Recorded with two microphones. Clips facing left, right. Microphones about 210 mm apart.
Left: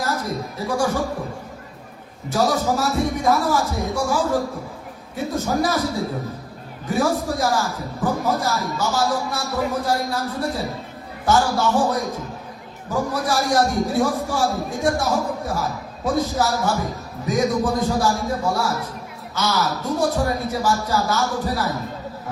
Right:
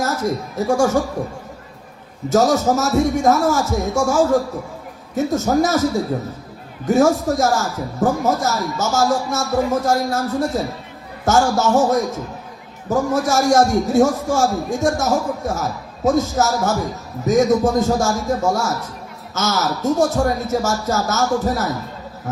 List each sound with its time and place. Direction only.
0.0 s speech: 45° right (ahead or behind)
2.3 s a man's voice: 45° right (ahead or behind)
6.8 s a man's voice: 45° right (ahead or behind)
11.3 s a man's voice: 45° right (ahead or behind)